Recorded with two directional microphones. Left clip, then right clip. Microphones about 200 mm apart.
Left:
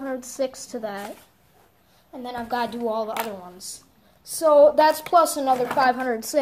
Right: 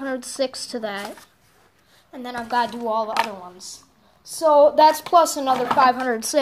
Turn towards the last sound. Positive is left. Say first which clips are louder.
# right 2 dB
turn(degrees=-10)  # may be behind; listen again after turning